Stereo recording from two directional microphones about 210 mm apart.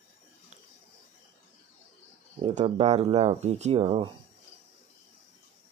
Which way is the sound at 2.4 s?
30° right (ahead or behind).